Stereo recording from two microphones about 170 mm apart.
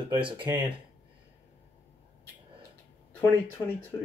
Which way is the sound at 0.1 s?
30° right (ahead or behind).